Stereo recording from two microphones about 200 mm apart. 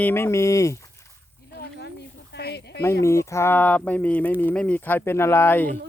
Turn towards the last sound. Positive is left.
turn(degrees=10)  # may be behind; listen again after turning